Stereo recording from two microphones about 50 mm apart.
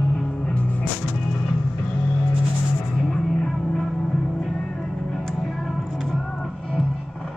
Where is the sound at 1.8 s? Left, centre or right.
Centre.